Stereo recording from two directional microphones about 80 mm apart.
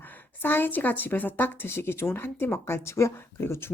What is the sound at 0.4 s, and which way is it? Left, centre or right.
Speech, left.